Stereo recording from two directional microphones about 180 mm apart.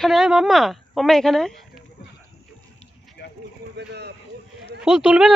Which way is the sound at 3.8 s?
65° right (ahead or behind).